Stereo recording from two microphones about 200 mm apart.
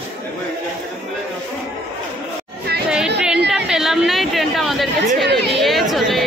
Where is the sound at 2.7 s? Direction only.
55° right (ahead or behind).